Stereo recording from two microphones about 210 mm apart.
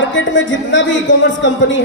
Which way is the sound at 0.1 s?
60° left (ahead or behind).